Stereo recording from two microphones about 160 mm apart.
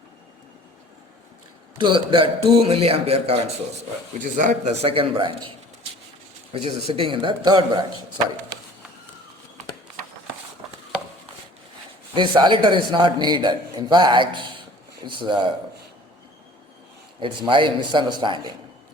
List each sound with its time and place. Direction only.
1.8 s a man's voice: 30° right (ahead or behind)
4.2 s speech: 55° right (ahead or behind)
4.8 s a man's voice: 35° right (ahead or behind)
6.5 s a man's voice: 40° right (ahead or behind)
12.1 s a man's voice: 30° right (ahead or behind)
17.2 s a man's voice: 30° right (ahead or behind)